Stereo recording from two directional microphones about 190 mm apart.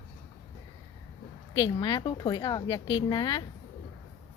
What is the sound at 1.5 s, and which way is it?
A woman's voice, 20° left (ahead or behind).